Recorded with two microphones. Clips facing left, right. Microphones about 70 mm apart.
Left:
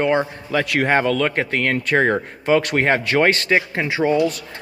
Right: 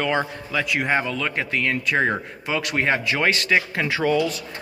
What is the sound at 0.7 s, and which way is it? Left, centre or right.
A man's voice, left.